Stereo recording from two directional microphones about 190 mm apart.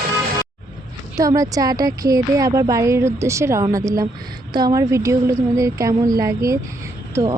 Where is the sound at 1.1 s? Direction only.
15° right (ahead or behind).